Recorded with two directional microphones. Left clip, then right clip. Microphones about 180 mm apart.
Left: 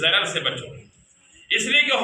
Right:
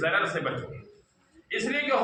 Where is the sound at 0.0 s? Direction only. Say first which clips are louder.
Left 5 dB; 15° left (ahead or behind).